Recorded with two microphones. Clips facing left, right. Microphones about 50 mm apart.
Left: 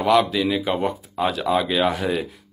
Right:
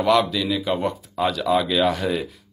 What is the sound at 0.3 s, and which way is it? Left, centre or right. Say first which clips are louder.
Speech: left 2 dB; centre.